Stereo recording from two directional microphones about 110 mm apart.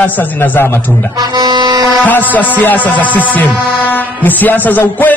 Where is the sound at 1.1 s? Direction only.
40° right (ahead or behind).